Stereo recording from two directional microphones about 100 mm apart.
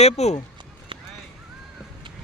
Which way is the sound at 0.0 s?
90° left.